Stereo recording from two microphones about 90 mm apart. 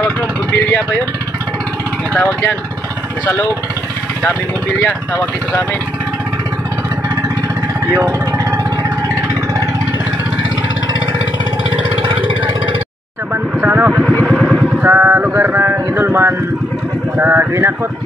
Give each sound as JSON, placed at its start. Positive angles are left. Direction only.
{"t": 2.1, "sound": "speech", "side_deg": 20}
{"t": 7.9, "sound": "speech", "side_deg": -45}
{"t": 13.6, "sound": "vehicle", "side_deg": -20}
{"t": 14.2, "sound": "vehicle", "side_deg": -5}
{"t": 14.8, "sound": "a sound", "side_deg": -20}
{"t": 17.5, "sound": "speech", "side_deg": -35}